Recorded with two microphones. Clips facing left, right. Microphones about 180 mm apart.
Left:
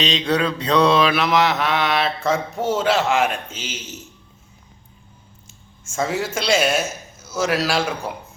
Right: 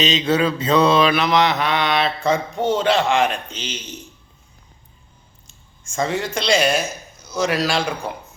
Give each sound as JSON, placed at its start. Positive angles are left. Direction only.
{"t": 0.0, "sound": "mantra", "side_deg": 0}
{"t": 5.5, "sound": "a man's voice", "side_deg": 5}